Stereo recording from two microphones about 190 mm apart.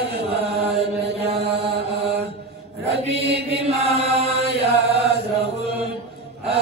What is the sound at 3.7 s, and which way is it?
Chant, 35° right (ahead or behind).